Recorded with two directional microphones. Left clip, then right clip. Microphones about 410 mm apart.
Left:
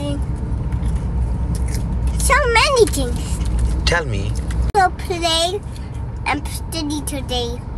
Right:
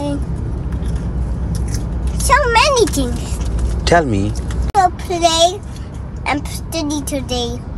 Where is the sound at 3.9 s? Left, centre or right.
Centre.